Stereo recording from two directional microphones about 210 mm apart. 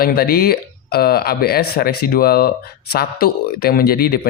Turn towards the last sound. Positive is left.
turn(degrees=45)  # may be behind; listen again after turning